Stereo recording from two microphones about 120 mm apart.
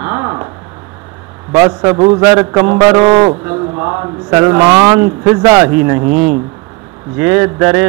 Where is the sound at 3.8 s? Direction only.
25° right (ahead or behind).